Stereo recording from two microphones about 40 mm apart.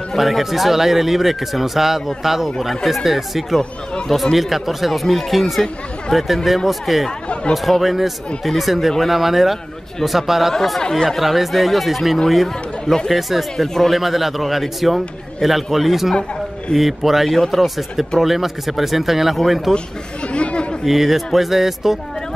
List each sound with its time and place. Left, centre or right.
0.2 s speech: centre
7.1 s speech: left
7.5 s speech: centre
10.5 s speech: centre
11.1 s speech: centre
12.4 s speech: centre
13.1 s speech: centre
20.2 s chatter: left
20.8 s speech: centre